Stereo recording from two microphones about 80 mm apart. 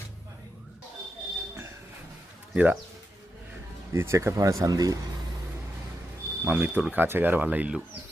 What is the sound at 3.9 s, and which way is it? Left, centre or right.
Speech, right.